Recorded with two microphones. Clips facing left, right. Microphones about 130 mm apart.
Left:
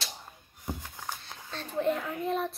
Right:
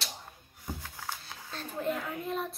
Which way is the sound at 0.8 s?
15° left (ahead or behind).